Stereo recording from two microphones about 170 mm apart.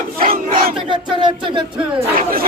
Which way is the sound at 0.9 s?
30° right (ahead or behind).